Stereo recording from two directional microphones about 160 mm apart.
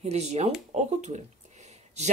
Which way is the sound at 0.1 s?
40° right (ahead or behind).